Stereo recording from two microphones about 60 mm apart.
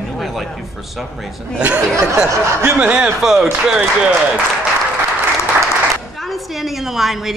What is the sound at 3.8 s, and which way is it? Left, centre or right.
Speech, right.